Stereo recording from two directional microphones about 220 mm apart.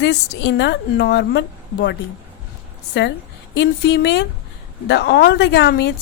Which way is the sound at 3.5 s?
50° left (ahead or behind).